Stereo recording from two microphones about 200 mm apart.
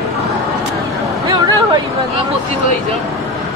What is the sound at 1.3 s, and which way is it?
Speech, 20° right (ahead or behind).